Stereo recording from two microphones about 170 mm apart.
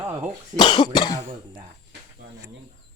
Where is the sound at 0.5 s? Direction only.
25° left (ahead or behind).